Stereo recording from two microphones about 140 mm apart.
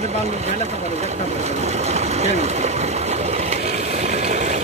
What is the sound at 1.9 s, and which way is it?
Engine, 50° right (ahead or behind).